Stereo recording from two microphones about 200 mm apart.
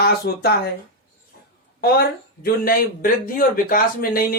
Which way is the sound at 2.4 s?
45° left (ahead or behind).